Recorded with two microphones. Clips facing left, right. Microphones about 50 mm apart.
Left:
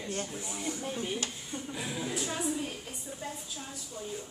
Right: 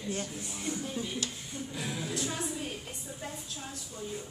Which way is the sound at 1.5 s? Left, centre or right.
Centre.